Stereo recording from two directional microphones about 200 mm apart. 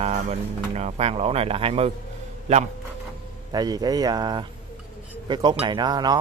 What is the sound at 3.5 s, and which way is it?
Speech, 20° right (ahead or behind).